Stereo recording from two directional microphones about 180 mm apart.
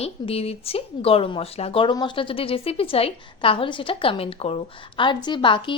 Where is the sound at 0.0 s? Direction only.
35° left (ahead or behind).